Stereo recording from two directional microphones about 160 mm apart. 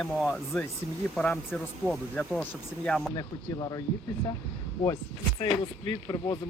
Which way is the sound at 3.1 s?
25° left (ahead or behind).